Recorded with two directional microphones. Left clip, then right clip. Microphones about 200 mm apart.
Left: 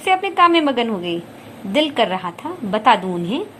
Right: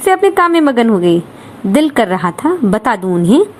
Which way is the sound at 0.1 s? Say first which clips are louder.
Right 4 dB; 25° right (ahead or behind).